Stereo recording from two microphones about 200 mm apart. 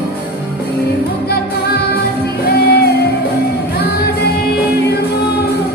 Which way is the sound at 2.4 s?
55° left (ahead or behind).